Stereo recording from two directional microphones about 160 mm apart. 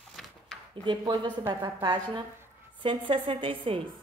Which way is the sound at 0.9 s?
25° right (ahead or behind).